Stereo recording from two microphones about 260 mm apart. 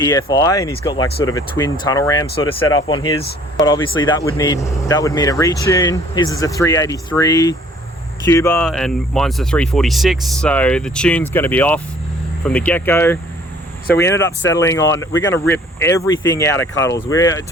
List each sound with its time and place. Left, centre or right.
0.0 s speech: centre